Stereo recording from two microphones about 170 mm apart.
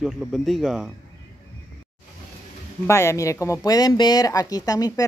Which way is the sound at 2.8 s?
15° left (ahead or behind).